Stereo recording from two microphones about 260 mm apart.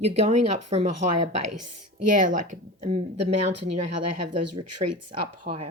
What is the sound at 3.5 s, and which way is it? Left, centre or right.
Speech, right.